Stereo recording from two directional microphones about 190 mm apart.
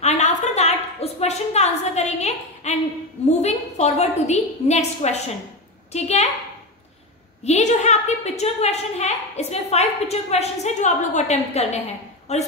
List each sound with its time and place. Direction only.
0.0 s a sound: 35° left (ahead or behind)
3.3 s a woman's voice: 35° left (ahead or behind)
7.4 s a woman's voice: 35° left (ahead or behind)